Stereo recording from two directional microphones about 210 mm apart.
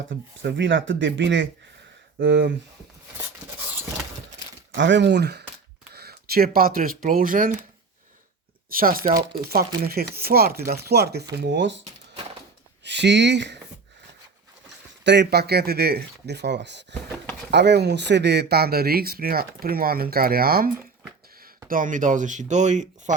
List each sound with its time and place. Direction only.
0.1 s speech: 55° right (ahead or behind)
4.7 s speech: 60° right (ahead or behind); by 7.5 s 40° right (ahead or behind)
8.7 s speech: 45° right (ahead or behind)
9.0 s speech: 25° right (ahead or behind)
9.4 s speech: 45° right (ahead or behind)
12.8 s speech: 55° right (ahead or behind)
15.0 s speech: 55° right (ahead or behind); by 23.1 s 35° right (ahead or behind)